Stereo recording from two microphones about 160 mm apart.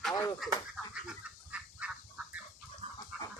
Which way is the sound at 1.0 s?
5° right (ahead or behind).